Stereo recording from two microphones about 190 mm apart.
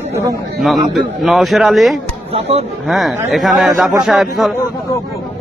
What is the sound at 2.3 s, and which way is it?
Speech, 30° right (ahead or behind).